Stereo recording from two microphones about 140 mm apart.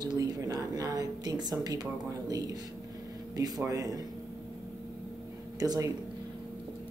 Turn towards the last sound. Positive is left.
turn(degrees=-25)  # may be behind; listen again after turning